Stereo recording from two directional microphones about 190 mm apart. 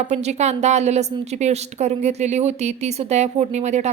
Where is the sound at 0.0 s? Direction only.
35° right (ahead or behind).